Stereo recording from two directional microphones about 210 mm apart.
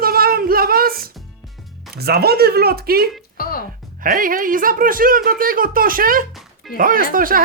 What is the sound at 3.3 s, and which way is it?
Music, 45° left (ahead or behind).